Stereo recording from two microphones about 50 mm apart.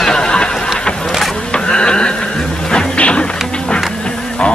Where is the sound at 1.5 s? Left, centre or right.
Centre.